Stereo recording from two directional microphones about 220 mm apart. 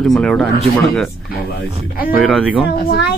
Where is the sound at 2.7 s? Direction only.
45° left (ahead or behind).